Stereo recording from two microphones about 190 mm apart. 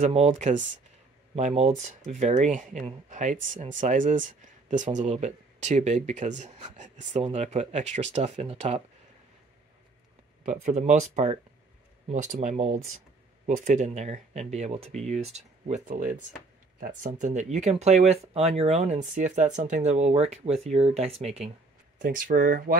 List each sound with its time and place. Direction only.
0.0 s speech: 35° right (ahead or behind)
10.4 s speech: 40° right (ahead or behind)
21.9 s speech: 45° right (ahead or behind)